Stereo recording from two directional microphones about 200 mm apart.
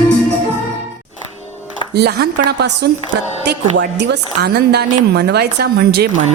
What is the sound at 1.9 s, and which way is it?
A woman's voice, 55° right (ahead or behind).